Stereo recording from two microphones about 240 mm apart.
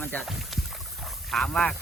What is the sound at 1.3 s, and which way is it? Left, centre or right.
Speech, centre.